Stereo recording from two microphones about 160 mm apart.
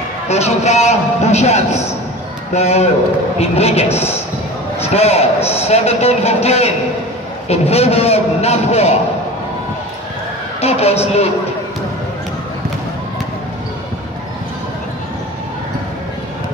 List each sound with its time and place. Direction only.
0.3 s a man's voice: 45° left (ahead or behind)
10.6 s a man's voice: 40° left (ahead or behind)